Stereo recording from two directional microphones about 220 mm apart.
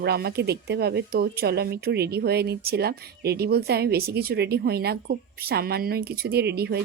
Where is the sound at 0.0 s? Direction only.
45° right (ahead or behind).